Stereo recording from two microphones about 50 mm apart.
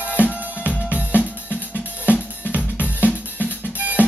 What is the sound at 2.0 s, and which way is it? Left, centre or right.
Drum, right.